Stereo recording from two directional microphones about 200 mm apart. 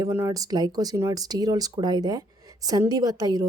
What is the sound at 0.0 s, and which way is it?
Speech, 15° right (ahead or behind).